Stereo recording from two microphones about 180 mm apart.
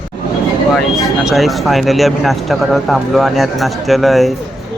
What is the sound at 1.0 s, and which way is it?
Speech, centre (ahead or behind).